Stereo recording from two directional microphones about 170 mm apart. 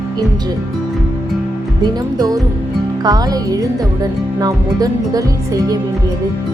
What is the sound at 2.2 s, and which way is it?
Music, 20° right (ahead or behind).